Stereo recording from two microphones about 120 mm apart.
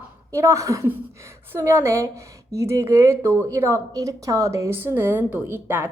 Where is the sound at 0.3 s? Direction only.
25° right (ahead or behind).